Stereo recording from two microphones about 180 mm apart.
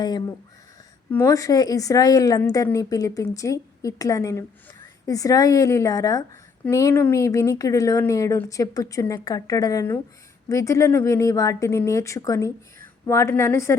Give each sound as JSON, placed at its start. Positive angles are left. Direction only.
{"t": 0.0, "sound": "speech", "side_deg": 20}